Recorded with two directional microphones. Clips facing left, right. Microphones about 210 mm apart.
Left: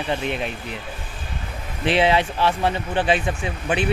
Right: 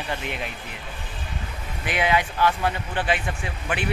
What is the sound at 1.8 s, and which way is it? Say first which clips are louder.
Speech: left 5 dB; 30° left (ahead or behind).